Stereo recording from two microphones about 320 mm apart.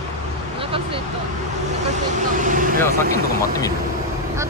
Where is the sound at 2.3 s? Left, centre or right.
Right.